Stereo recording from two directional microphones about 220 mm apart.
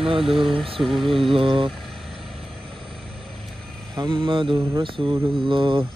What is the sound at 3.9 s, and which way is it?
Mantra, 20° right (ahead or behind).